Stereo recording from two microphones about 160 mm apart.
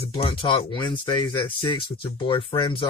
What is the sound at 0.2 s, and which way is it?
Speech, 35° left (ahead or behind).